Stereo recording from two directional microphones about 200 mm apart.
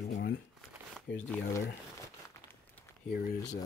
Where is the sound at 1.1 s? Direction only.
55° left (ahead or behind).